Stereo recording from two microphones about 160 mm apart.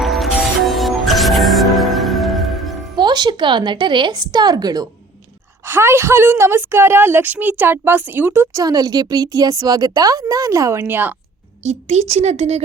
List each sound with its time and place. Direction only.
0.0 s music: centre (ahead or behind)
2.9 s a woman's voice: 25° right (ahead or behind)
11.6 s speech: 45° right (ahead or behind)